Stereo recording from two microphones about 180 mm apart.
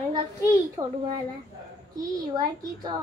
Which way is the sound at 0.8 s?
20° right (ahead or behind).